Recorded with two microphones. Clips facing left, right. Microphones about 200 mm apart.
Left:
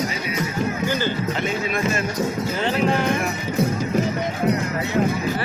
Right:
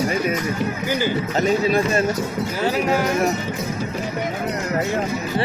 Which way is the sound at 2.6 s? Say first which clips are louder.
Right 1 dB; 5° right (ahead or behind).